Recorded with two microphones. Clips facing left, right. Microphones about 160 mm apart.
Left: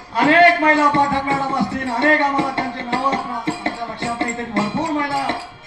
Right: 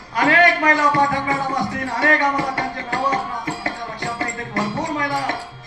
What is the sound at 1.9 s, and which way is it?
Music, 25° left (ahead or behind).